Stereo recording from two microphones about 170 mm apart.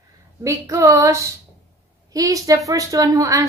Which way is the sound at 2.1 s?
20° right (ahead or behind).